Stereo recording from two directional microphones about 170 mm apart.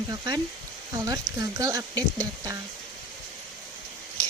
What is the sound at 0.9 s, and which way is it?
Speech, 20° right (ahead or behind).